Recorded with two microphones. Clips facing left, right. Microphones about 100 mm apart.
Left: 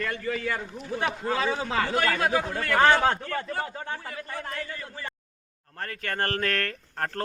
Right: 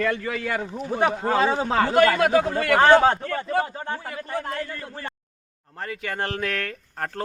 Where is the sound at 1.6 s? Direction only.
40° right (ahead or behind).